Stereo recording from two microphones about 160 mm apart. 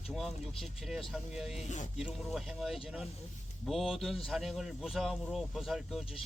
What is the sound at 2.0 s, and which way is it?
Speech, centre (ahead or behind).